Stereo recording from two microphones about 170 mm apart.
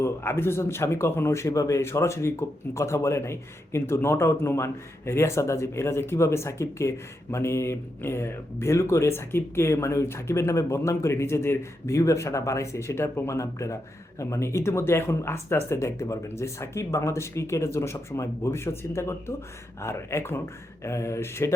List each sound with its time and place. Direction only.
0.0 s speech: 15° left (ahead or behind)